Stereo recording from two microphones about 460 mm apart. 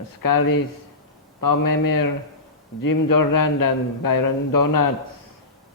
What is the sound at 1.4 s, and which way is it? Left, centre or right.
A man's voice, left.